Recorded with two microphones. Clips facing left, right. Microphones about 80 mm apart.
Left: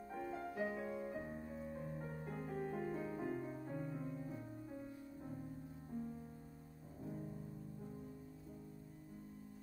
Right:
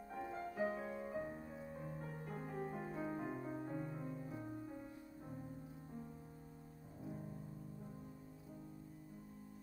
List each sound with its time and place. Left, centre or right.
0.1 s music: centre
0.7 s music: right
1.1 s music: centre
2.4 s music: centre